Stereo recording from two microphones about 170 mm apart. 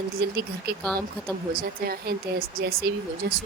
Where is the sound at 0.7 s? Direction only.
65° right (ahead or behind).